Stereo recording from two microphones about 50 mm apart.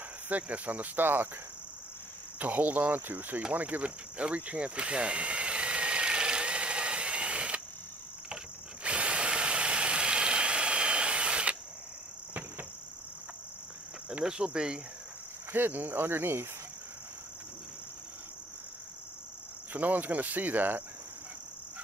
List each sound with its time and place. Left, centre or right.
0.3 s cricket: right
2.3 s cricket: right
3.5 s a sound: right
8.8 s drill: right
14.2 s cricket: centre
15.5 s cricket: right
19.7 s cricket: right